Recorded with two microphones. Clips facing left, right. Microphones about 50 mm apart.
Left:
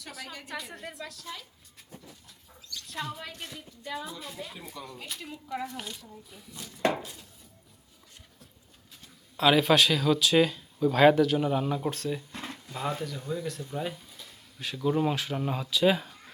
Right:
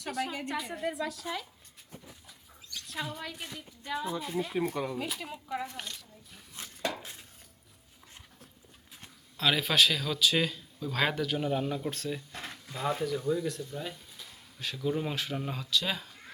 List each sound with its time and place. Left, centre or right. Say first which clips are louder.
0.0 s speech: right 8 dB; centre
2.8 s a woman's voice: left 1 dB; centre
4.3 s speech: right 7 dB; centre
4.5 s speech: right 12 dB; right
4.9 s speech: right 4 dB; centre
5.7 s speech: left 3 dB; centre
7.0 s dishes: left 3 dB; right
9.4 s speech: left 5 dB; centre
13.6 s speech: left 4 dB; centre
13.9 s speech: left 2 dB; centre